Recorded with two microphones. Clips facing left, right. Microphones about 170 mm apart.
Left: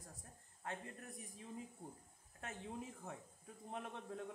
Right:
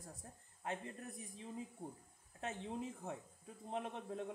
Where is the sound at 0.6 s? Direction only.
20° right (ahead or behind).